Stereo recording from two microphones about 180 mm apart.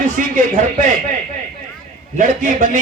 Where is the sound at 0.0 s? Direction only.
45° right (ahead or behind).